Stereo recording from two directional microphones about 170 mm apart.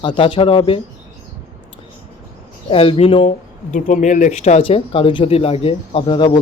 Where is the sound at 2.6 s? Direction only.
30° left (ahead or behind).